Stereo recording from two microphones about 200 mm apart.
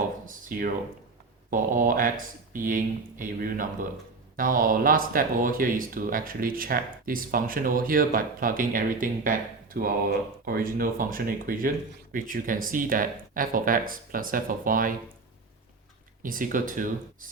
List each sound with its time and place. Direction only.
0.3 s speech: 45° right (ahead or behind)
16.2 s speech: 45° right (ahead or behind)